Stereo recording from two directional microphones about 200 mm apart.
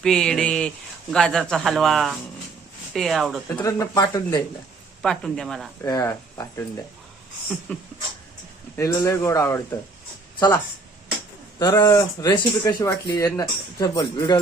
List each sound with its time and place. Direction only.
0.0 s a man's voice: 5° left (ahead or behind)
3.6 s speech: 15° left (ahead or behind)
5.0 s a man's voice: centre (ahead or behind)
5.8 s speech: 15° left (ahead or behind)
7.7 s speech: 5° left (ahead or behind)
11.6 s speech: 20° left (ahead or behind)